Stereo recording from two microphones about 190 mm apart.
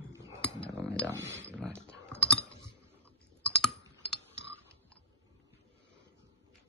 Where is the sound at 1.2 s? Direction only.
70° right (ahead or behind).